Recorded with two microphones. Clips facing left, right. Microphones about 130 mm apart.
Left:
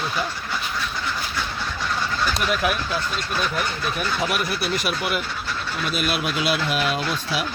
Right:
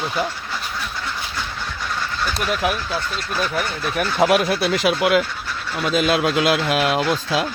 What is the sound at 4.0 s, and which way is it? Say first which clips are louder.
Speech: right 9 dB; 85° right.